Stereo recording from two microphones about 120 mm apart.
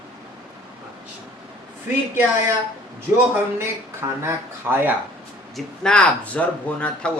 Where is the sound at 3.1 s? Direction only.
20° right (ahead or behind).